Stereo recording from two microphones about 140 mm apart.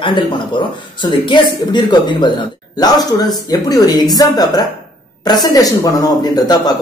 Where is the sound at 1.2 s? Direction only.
35° left (ahead or behind).